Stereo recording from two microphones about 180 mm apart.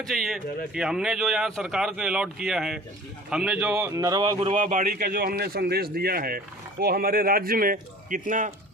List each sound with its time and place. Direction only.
0.1 s a man's voice: centre (ahead or behind); by 4.4 s 20° right (ahead or behind)
4.4 s a man's voice: 40° right (ahead or behind)